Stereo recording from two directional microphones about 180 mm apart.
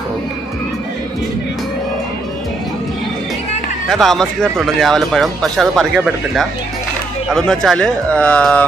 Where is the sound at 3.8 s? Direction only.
Centre (ahead or behind).